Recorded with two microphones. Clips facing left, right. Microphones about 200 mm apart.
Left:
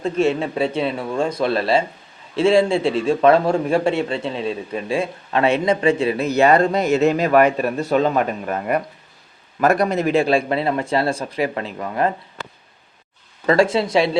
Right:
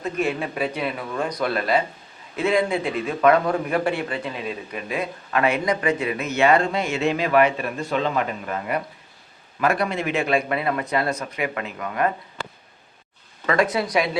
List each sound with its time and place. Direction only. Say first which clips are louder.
0.0 s a man's voice: left 6 dB; 25° left (ahead or behind)
13.5 s a man's voice: left 5 dB; 30° left (ahead or behind)